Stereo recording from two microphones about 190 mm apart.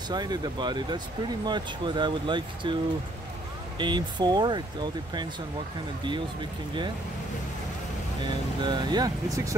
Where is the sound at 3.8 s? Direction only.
25° right (ahead or behind).